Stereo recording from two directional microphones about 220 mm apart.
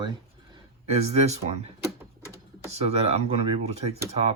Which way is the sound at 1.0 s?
30° right (ahead or behind).